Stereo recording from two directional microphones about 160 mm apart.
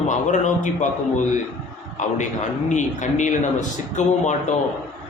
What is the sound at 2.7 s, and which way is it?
A man's voice, 50° left (ahead or behind).